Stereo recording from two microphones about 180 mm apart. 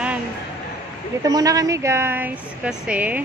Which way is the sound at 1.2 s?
20° right (ahead or behind).